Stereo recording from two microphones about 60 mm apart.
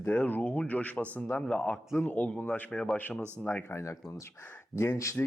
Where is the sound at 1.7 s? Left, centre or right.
Left.